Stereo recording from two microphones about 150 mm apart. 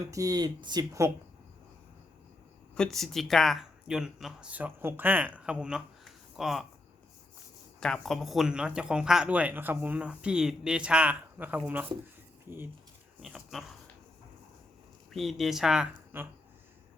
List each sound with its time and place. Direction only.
0.1 s speech: 25° right (ahead or behind)
2.7 s speech: 5° left (ahead or behind)
7.8 s speech: 5° left (ahead or behind); by 12.6 s 15° right (ahead or behind)
13.2 s speech: centre (ahead or behind)
15.1 s speech: centre (ahead or behind)
16.1 s speech: 15° right (ahead or behind)